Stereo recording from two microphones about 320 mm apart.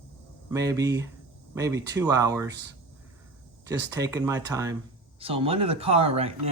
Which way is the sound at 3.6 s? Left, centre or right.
Centre.